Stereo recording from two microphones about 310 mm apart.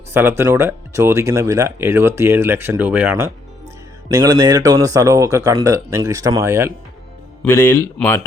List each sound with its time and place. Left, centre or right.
0.1 s speech: centre
7.4 s speech: centre